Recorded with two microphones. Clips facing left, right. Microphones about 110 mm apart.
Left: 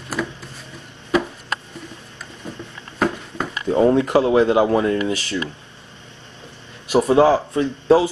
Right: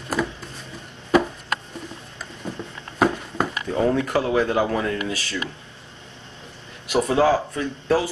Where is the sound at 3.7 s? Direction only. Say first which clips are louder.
Left 7 dB; 25° left (ahead or behind).